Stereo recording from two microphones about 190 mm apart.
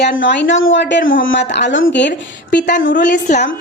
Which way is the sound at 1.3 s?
65° left (ahead or behind).